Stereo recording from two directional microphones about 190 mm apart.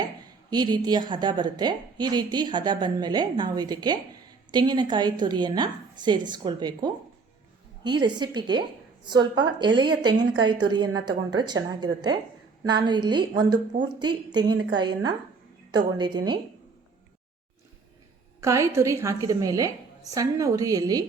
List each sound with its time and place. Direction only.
0.5 s a woman's voice: 20° right (ahead or behind)
18.3 s a woman's voice: 15° right (ahead or behind)